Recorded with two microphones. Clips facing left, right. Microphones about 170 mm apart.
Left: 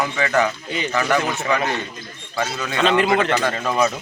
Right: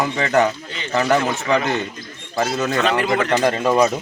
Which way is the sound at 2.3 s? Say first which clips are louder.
Right 5 dB; 45° right (ahead or behind).